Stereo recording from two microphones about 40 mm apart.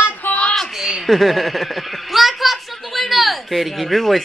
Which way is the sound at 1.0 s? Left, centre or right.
Centre.